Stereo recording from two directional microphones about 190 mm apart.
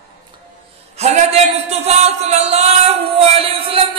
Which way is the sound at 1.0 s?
35° right (ahead or behind).